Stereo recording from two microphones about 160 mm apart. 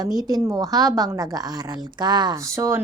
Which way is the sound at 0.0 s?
25° right (ahead or behind).